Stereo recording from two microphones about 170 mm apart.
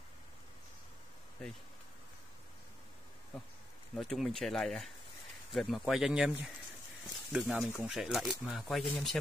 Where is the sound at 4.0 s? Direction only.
Centre (ahead or behind).